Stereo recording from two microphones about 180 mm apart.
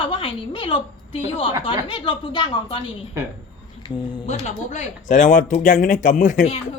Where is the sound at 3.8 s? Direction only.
25° left (ahead or behind).